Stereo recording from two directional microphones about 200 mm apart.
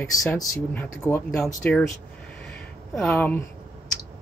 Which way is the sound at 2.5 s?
5° left (ahead or behind).